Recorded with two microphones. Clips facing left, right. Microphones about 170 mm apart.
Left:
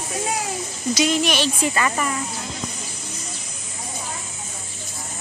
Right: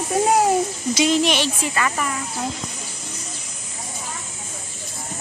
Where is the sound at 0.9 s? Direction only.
25° right (ahead or behind).